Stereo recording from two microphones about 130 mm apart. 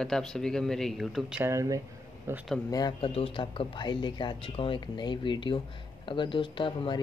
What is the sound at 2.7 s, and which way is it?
Speech, 30° left (ahead or behind).